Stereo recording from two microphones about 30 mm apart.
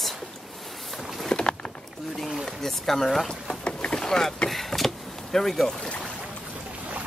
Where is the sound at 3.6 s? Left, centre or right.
Left.